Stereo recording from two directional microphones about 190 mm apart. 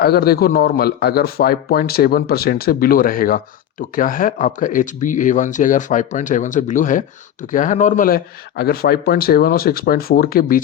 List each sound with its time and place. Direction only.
0.0 s speech: 55° left (ahead or behind)